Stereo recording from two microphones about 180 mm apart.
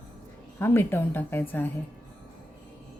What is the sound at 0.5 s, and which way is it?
A woman's voice, 10° left (ahead or behind).